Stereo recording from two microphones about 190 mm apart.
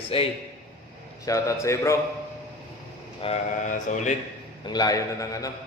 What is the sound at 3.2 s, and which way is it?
Speech, 35° left (ahead or behind).